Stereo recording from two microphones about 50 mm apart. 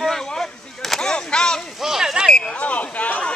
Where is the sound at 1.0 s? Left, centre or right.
Centre.